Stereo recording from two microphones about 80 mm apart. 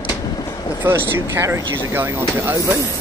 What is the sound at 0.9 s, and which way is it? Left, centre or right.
Speech, right.